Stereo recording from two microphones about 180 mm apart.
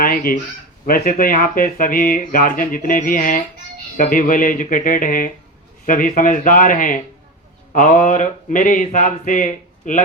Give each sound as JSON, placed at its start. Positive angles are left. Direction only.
{"t": 0.0, "sound": "a man's voice", "side_deg": 55}